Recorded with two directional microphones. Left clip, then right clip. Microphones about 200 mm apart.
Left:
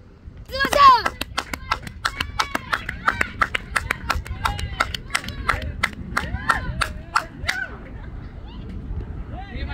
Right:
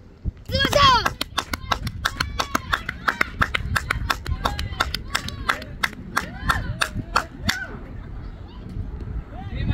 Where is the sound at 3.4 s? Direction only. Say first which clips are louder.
Left 1 dB; 25° left (ahead or behind).